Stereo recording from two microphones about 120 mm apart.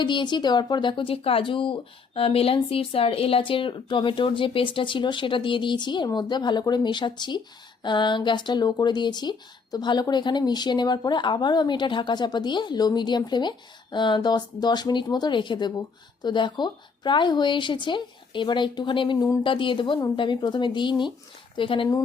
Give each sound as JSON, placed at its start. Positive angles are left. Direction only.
{"t": 0.0, "sound": "speech", "side_deg": 40}